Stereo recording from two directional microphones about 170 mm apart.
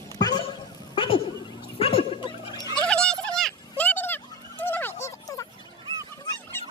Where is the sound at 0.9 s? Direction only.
30° left (ahead or behind).